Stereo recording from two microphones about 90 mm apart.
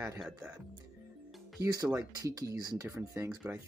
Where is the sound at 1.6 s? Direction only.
40° right (ahead or behind).